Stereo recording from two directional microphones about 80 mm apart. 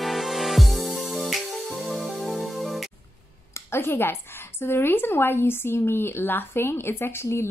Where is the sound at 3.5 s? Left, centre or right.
Left.